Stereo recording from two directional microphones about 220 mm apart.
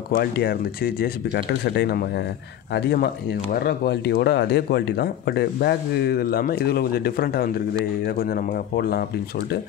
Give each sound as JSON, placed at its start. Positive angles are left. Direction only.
{"t": 0.1, "sound": "speech", "side_deg": 45}